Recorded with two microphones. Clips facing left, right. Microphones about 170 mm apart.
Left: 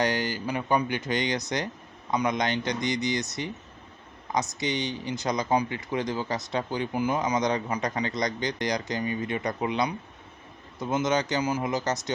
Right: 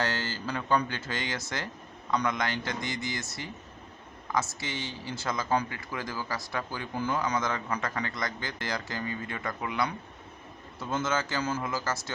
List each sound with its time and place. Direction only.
0.0 s speech: 15° left (ahead or behind)